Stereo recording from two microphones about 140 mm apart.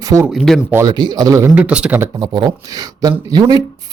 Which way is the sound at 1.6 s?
10° right (ahead or behind).